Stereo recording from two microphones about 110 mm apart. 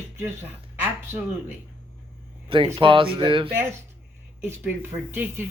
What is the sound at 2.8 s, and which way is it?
Speech, 50° right (ahead or behind).